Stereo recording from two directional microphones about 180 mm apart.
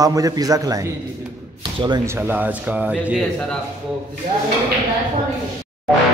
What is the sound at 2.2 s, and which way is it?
A man's voice, 10° right (ahead or behind).